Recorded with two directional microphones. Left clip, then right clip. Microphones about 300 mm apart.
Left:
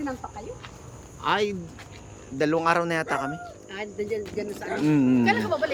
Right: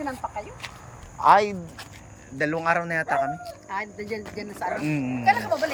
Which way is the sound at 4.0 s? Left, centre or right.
Right.